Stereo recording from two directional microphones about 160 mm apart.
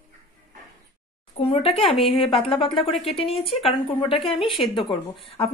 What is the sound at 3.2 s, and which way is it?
A woman's voice, 35° left (ahead or behind).